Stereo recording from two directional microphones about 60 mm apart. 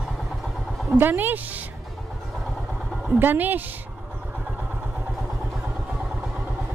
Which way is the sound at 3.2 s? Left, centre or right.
Right.